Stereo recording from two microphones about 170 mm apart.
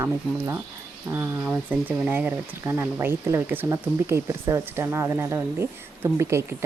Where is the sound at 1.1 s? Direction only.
15° right (ahead or behind).